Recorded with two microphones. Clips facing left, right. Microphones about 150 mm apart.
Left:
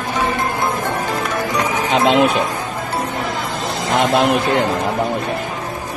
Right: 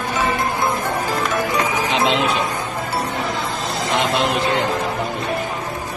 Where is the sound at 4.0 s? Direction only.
50° left (ahead or behind).